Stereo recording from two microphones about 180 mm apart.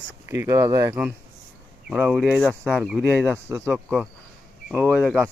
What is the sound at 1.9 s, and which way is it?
Speech, 5° right (ahead or behind).